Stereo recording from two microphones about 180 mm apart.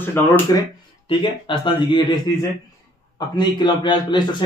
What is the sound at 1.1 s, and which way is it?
A man's voice, 25° left (ahead or behind).